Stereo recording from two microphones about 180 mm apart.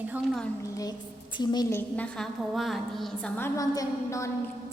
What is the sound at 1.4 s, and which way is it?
Speech, 25° left (ahead or behind).